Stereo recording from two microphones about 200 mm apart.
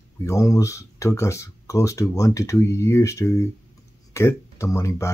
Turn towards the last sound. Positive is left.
turn(degrees=15)  # may be behind; listen again after turning